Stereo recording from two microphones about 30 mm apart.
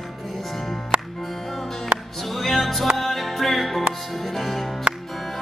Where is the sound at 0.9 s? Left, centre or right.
Right.